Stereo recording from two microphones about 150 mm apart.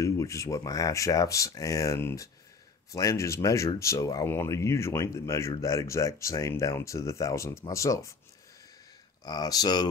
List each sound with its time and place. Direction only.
0.0 s speech: 20° left (ahead or behind)
9.2 s speech: 25° left (ahead or behind)